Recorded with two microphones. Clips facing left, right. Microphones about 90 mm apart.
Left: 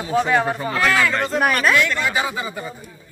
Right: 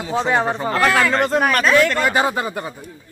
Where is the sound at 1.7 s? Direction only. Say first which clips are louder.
Right 4 dB; 45° right (ahead or behind).